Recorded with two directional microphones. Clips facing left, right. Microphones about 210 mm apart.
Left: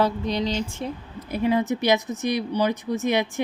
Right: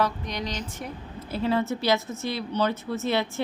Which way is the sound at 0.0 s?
30° left (ahead or behind).